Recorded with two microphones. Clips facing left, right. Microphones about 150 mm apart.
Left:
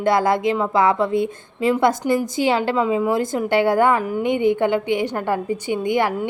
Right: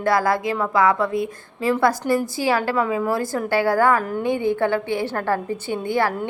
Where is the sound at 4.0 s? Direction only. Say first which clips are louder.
Left 3 dB; 10° left (ahead or behind).